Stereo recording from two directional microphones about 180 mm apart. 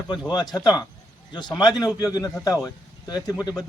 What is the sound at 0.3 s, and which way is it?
A man's voice, 20° left (ahead or behind).